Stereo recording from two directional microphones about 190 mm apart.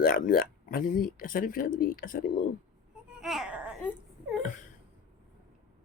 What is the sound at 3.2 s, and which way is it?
Baby cry, centre (ahead or behind).